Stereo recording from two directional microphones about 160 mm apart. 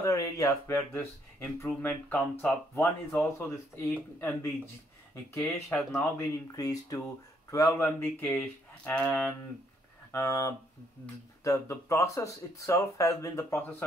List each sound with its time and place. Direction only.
0.0 s speech: 20° left (ahead or behind)
5.7 s speech: centre (ahead or behind)
5.9 s speech: 20° left (ahead or behind)
10.1 s speech: 20° left (ahead or behind)